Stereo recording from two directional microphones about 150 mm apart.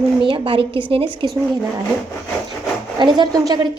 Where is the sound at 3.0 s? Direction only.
30° right (ahead or behind).